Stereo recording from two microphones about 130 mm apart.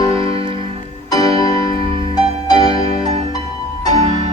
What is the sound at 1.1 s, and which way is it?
Music, 30° left (ahead or behind).